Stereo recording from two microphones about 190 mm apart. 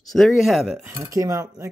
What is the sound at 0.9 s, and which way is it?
Cutlery, 15° right (ahead or behind).